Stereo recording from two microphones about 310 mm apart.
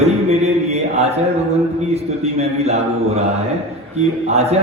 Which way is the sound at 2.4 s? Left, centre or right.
Centre.